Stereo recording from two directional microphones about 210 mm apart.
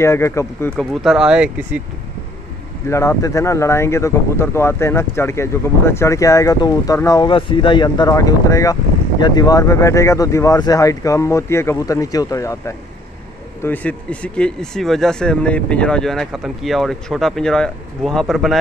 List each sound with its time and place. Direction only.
0.0 s speech: 15° left (ahead or behind); by 1.5 s 5° right (ahead or behind)
2.9 s speech: 15° left (ahead or behind)